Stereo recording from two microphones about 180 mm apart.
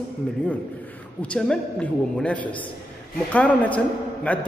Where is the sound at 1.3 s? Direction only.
5° left (ahead or behind).